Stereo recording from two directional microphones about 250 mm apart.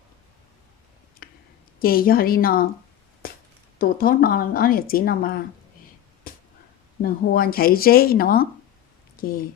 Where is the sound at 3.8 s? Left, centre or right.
Left.